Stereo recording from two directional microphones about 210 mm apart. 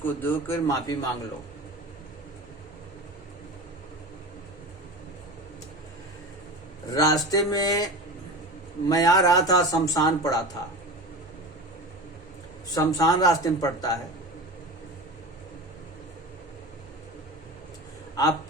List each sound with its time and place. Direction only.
0.0 s speech: 10° left (ahead or behind)
6.9 s speech: 15° left (ahead or behind)
8.9 s speech: 15° left (ahead or behind)
12.7 s speech: 15° left (ahead or behind)